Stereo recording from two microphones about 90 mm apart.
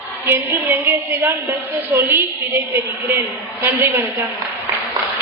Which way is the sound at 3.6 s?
25° right (ahead or behind).